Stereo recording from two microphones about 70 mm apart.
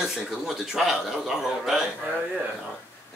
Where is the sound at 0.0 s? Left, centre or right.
Centre.